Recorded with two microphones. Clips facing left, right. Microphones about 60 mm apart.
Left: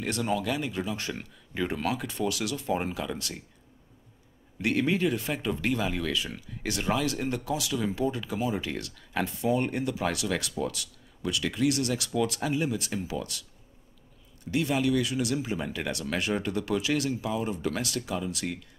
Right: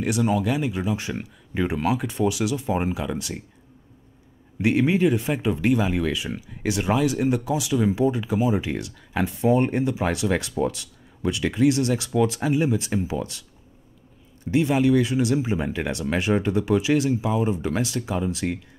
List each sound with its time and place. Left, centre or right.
0.0 s speech: centre
4.6 s speech: centre
9.4 s speech: right